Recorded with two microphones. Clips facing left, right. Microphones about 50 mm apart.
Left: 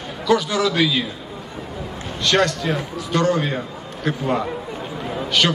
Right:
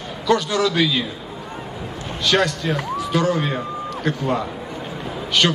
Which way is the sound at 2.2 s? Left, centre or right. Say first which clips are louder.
Left 1 dB; centre.